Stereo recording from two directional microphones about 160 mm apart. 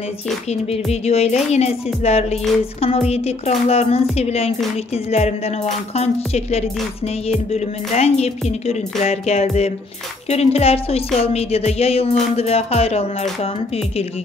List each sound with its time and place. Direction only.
1.0 s speech: 40° left (ahead or behind)